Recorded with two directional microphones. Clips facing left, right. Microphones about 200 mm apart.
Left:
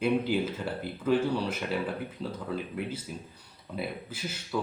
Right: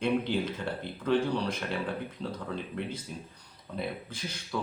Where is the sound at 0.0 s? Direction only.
5° left (ahead or behind).